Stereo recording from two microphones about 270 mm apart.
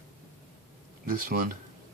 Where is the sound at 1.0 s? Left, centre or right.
Right.